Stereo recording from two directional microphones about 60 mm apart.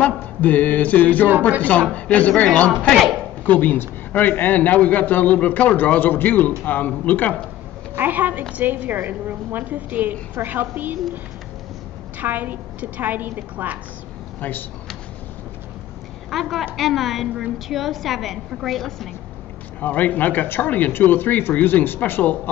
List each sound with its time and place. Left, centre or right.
0.0 s a man's voice: left
7.9 s a woman's voice: right
12.2 s a woman's voice: right
16.3 s a woman's voice: centre
19.8 s a man's voice: left